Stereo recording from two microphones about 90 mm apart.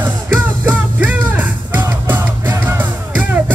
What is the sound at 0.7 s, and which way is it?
Music, 20° right (ahead or behind).